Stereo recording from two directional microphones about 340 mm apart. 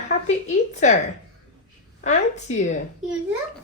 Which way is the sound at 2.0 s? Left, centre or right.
Left.